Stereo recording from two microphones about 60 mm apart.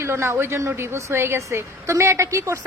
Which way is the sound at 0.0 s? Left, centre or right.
Right.